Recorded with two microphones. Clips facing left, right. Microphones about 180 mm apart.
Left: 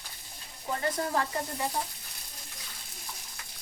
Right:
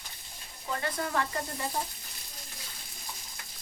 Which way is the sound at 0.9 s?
30° left (ahead or behind).